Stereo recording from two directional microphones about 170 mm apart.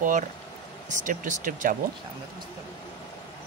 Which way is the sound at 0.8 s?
50° right (ahead or behind).